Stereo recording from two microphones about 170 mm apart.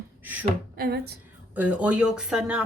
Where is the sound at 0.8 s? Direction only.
70° right (ahead or behind).